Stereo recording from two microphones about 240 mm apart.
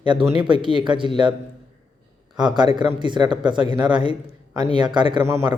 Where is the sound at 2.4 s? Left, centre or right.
Centre.